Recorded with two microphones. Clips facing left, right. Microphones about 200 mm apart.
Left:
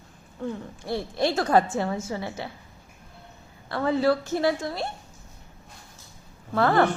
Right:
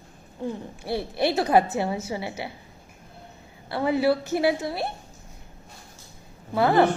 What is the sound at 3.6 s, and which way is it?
A woman's voice, 10° right (ahead or behind).